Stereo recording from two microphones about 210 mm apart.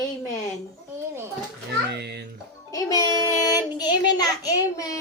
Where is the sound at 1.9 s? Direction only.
50° right (ahead or behind).